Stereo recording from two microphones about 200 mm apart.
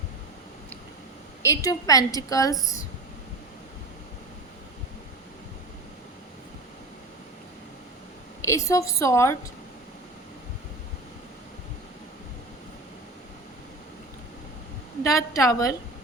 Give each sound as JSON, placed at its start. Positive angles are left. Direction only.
{"t": 1.5, "sound": "a woman's voice", "side_deg": 15}
{"t": 8.4, "sound": "a woman's voice", "side_deg": 15}
{"t": 15.0, "sound": "a woman's voice", "side_deg": 15}